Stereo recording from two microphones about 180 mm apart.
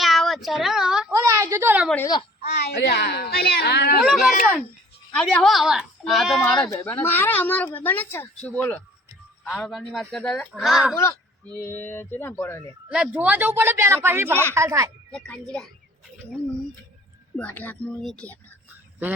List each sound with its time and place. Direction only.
0.0 s a sound: centre (ahead or behind)
1.1 s a sound: 15° right (ahead or behind)
2.4 s a woman's voice: 65° left (ahead or behind)
4.0 s speech: centre (ahead or behind)
11.5 s speech: 10° left (ahead or behind)
12.9 s a man's voice: 5° right (ahead or behind)
15.1 s speech: 5° left (ahead or behind)
17.3 s speech: 10° left (ahead or behind)